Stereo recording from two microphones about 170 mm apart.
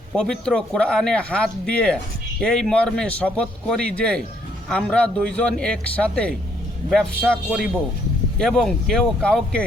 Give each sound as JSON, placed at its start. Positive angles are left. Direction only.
{"t": 0.2, "sound": "speech", "side_deg": 5}